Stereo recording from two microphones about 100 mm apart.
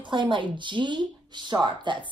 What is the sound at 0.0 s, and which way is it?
Speech, 55° right (ahead or behind).